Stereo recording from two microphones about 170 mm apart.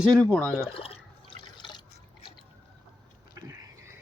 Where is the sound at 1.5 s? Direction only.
25° left (ahead or behind).